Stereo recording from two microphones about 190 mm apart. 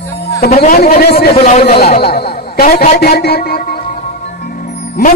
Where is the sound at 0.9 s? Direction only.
60° left (ahead or behind).